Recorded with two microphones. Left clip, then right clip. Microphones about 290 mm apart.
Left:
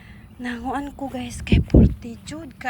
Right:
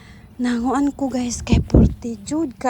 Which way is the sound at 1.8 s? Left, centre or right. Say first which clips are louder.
Right 2 dB; centre.